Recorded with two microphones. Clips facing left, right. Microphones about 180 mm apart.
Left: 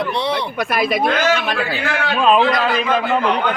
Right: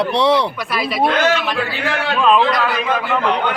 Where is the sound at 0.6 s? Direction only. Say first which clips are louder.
Left 4 dB; 50° left (ahead or behind).